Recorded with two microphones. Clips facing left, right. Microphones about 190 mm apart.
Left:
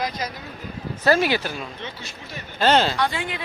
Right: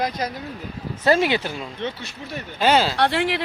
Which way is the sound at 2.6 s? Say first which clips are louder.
Even; 10° right (ahead or behind).